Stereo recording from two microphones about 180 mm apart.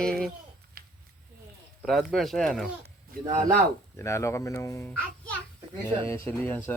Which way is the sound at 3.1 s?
55° right (ahead or behind).